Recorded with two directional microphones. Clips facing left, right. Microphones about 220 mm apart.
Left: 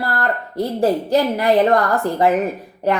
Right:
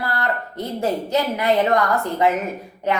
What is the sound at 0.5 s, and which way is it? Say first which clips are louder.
A woman's voice: left 8 dB; 35° left (ahead or behind).